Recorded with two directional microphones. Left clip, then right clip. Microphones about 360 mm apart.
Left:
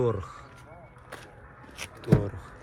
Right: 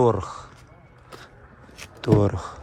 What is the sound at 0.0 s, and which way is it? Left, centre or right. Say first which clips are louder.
Speech: right 8 dB; centre.